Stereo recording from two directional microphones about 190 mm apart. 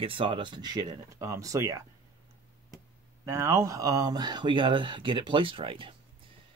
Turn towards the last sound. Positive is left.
turn(degrees=-25)  # may be behind; listen again after turning